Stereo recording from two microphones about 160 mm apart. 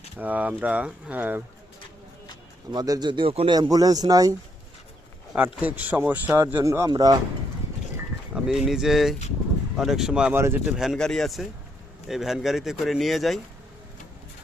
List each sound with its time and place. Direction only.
0.2 s speech: 10° right (ahead or behind)
2.7 s speech: 25° right (ahead or behind)
5.6 s speech: 10° right (ahead or behind)
8.4 s speech: 5° right (ahead or behind)
10.8 s speech: centre (ahead or behind)